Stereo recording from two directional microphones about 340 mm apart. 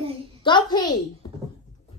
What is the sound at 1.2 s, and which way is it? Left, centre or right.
Beatboxing, centre.